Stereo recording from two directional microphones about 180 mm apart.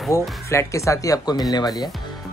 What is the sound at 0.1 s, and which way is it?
Speech, 15° left (ahead or behind).